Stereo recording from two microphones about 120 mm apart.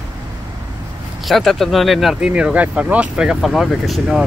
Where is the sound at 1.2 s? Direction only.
Centre (ahead or behind).